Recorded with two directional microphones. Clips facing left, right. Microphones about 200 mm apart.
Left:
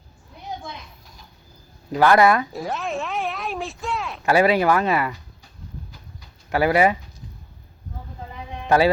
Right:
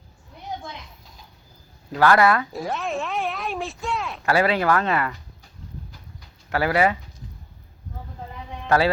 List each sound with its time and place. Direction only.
1.9 s speech: 15° left (ahead or behind)
2.5 s speech: centre (ahead or behind)
4.3 s speech: 15° left (ahead or behind)
6.5 s speech: 15° left (ahead or behind)
8.6 s speech: 15° left (ahead or behind)